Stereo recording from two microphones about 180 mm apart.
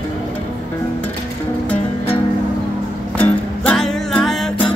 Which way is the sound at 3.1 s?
10° left (ahead or behind).